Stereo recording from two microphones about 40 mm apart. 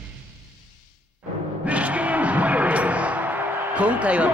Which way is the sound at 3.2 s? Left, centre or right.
Right.